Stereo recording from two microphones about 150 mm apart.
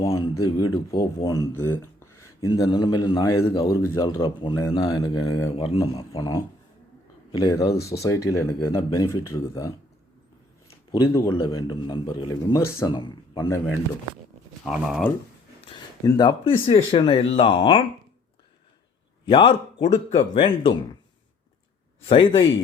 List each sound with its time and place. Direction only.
0.0 s speech: 20° left (ahead or behind)
2.5 s speech: 30° left (ahead or behind)
5.6 s speech: 40° left (ahead or behind)
6.1 s speech: 20° left (ahead or behind)
11.1 s speech: 20° left (ahead or behind)
12.9 s speech: 30° left (ahead or behind)
13.3 s speech: 20° left (ahead or behind)
14.7 s speech: 5° right (ahead or behind)
15.7 s speech: 30° left (ahead or behind)
19.2 s speech: 35° left (ahead or behind)
22.0 s speech: 35° left (ahead or behind)